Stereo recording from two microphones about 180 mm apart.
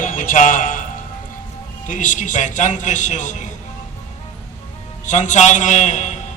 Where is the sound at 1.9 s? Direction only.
45° left (ahead or behind).